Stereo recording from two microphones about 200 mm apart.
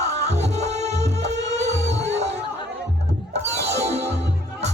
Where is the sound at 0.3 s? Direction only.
35° right (ahead or behind).